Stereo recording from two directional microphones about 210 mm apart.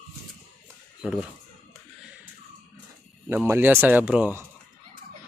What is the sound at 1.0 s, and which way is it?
Speech, 5° right (ahead or behind).